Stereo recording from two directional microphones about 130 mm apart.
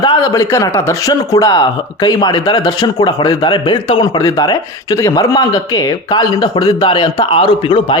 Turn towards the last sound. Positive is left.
turn(degrees=40)  # may be behind; listen again after turning